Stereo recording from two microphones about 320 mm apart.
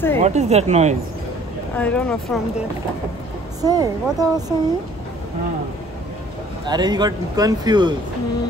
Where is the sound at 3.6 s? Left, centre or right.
Centre.